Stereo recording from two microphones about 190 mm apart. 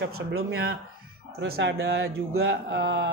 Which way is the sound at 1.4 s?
65° right (ahead or behind).